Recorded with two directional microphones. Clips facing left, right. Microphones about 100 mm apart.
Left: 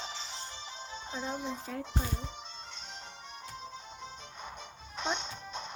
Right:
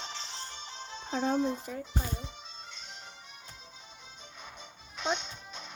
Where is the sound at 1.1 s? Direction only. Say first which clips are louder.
Right 8 dB; 65° right (ahead or behind).